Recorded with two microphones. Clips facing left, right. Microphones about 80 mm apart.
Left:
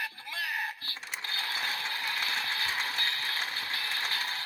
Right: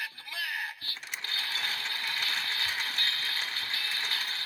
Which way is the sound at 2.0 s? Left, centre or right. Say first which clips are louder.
Left 1 dB; centre.